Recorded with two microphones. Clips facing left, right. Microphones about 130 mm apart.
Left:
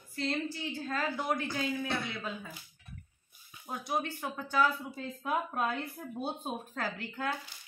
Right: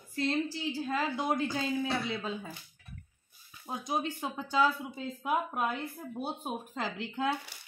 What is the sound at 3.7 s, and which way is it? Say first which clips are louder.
Speech: right 1 dB; 20° right (ahead or behind).